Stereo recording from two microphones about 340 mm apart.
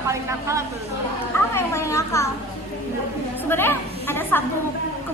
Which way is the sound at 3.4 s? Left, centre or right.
Centre.